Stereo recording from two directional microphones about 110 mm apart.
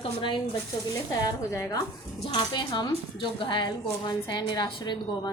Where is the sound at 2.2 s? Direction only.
50° left (ahead or behind).